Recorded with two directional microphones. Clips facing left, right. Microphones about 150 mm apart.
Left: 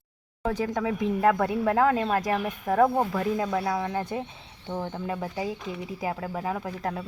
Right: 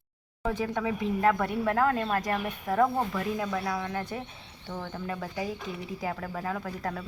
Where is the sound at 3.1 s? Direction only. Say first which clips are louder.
Left 4 dB; 35° left (ahead or behind).